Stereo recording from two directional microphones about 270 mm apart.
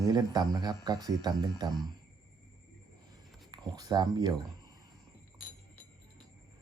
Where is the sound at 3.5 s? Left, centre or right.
Centre.